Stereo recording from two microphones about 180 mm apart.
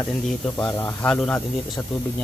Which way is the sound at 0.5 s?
15° left (ahead or behind).